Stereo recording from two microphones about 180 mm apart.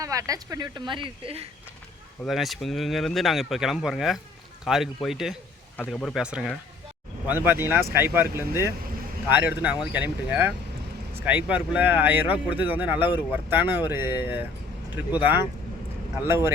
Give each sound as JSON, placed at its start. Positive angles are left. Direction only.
{"t": 0.0, "sound": "speech", "side_deg": -20}
{"t": 2.2, "sound": "speech", "side_deg": 0}
{"t": 5.0, "sound": "a sound", "side_deg": 0}
{"t": 5.8, "sound": "speech", "side_deg": 5}